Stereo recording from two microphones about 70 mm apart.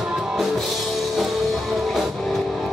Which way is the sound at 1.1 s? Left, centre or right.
Centre.